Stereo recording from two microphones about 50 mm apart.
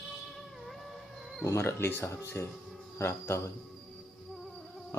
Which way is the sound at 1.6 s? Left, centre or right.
Left.